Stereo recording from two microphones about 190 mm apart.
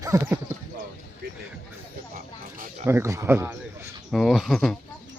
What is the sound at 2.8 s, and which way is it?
Speech, 15° right (ahead or behind).